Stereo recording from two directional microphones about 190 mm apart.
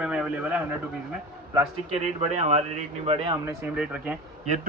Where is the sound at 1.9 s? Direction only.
35° right (ahead or behind).